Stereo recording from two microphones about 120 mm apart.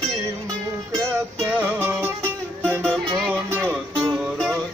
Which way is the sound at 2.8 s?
5° left (ahead or behind).